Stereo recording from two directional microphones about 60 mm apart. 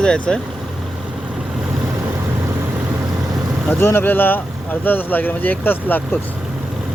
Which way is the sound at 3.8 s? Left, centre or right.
Left.